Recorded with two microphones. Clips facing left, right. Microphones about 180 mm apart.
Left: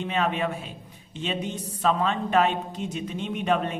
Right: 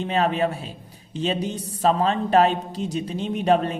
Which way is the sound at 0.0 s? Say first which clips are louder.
Right 4 dB; 35° right (ahead or behind).